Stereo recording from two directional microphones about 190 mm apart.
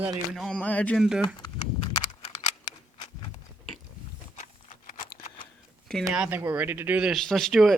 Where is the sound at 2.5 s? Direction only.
20° left (ahead or behind).